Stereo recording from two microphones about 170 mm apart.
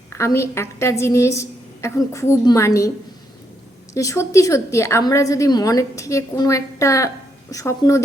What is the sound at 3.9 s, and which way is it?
A woman's voice, 20° left (ahead or behind).